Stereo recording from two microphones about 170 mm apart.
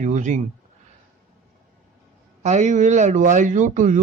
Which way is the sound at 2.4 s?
45° right (ahead or behind).